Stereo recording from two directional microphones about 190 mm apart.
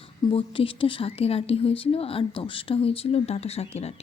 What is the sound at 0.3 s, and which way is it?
Speech, 30° left (ahead or behind).